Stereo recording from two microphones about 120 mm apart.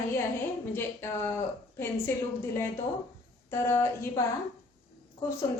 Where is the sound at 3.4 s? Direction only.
25° left (ahead or behind).